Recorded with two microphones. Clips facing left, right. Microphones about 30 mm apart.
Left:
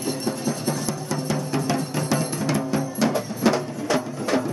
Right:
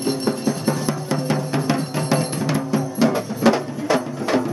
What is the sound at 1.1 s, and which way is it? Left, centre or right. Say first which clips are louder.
Music: right 3 dB; right.